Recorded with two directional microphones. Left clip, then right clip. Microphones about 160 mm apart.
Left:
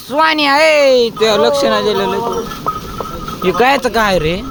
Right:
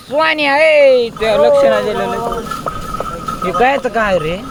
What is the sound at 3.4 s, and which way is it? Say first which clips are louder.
Speech: left 1 dB; 55° left (ahead or behind).